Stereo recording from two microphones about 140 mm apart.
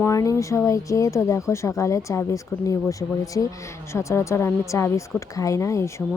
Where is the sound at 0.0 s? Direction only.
25° left (ahead or behind).